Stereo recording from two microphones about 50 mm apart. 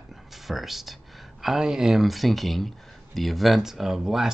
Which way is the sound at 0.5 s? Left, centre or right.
Centre.